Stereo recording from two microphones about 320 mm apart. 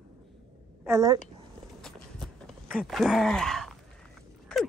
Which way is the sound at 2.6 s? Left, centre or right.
Centre.